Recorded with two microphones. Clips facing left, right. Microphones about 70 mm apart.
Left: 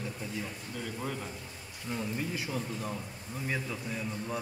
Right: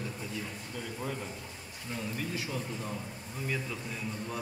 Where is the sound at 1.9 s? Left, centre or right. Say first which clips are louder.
Left 2 dB; centre.